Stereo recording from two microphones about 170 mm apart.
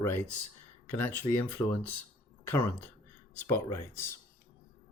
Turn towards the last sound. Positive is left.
turn(degrees=15)  # may be behind; listen again after turning